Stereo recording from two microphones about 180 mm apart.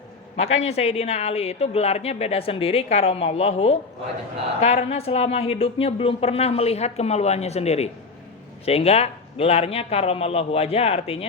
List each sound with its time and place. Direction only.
0.3 s speech: 35° left (ahead or behind)